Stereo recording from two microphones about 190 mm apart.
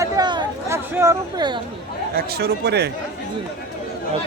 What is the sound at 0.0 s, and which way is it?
Chatter, 20° right (ahead or behind).